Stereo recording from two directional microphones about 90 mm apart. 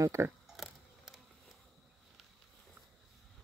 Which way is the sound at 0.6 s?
Centre (ahead or behind).